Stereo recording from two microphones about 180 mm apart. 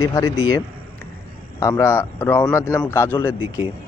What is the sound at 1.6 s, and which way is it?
Speech, 15° left (ahead or behind).